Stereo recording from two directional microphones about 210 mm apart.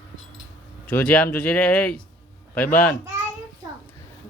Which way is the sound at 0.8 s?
5° left (ahead or behind).